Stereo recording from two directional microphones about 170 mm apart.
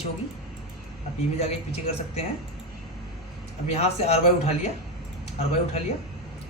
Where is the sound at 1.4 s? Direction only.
40° left (ahead or behind).